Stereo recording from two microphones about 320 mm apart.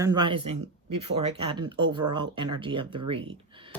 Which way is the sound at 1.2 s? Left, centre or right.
Centre.